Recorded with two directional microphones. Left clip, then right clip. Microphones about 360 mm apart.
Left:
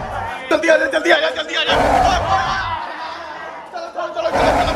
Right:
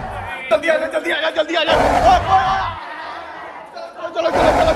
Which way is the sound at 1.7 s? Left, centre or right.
Centre.